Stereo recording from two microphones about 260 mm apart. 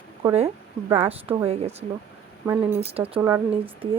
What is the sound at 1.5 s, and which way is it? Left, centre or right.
Speech, right.